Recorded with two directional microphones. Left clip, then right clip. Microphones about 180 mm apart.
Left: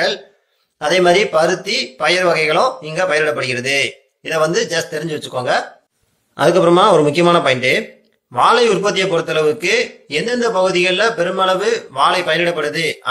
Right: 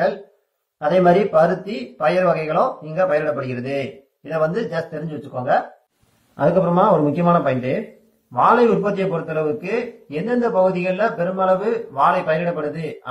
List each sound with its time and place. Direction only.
0.8 s a man's voice: 20° left (ahead or behind)